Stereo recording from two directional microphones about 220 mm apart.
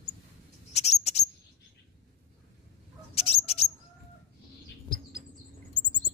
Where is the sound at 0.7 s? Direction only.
30° left (ahead or behind).